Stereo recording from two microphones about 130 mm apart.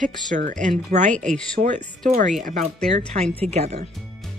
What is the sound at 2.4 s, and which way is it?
Speech, 90° right.